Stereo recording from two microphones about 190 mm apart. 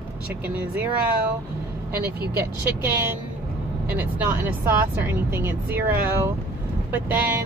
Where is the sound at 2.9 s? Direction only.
10° right (ahead or behind).